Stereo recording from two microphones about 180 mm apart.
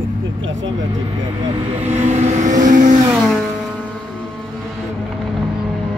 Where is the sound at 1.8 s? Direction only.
40° right (ahead or behind).